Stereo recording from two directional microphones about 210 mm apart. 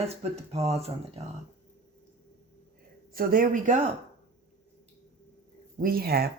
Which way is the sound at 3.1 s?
45° right (ahead or behind).